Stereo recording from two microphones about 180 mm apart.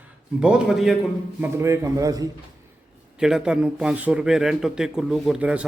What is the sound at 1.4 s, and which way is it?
Speech, 15° right (ahead or behind).